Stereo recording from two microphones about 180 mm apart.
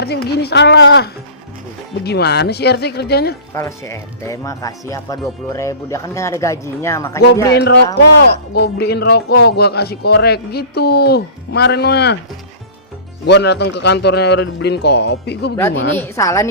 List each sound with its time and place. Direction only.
0.0 s a man's voice: 65° left (ahead or behind)
3.5 s speech: 15° left (ahead or behind)
7.5 s speech: 65° left (ahead or behind)
13.2 s a man's voice: 70° left (ahead or behind)
15.7 s a woman's voice: 90° left
16.0 s speech: 15° left (ahead or behind)